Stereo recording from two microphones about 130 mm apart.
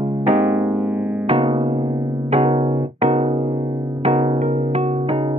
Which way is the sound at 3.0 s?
60° right (ahead or behind).